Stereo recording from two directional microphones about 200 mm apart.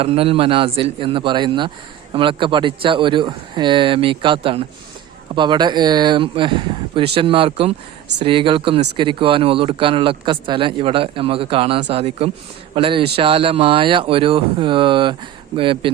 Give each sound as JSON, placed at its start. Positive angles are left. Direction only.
{"t": 0.0, "sound": "speech", "side_deg": -30}